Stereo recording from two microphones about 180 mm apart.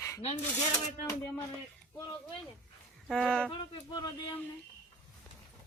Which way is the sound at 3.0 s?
5° left (ahead or behind).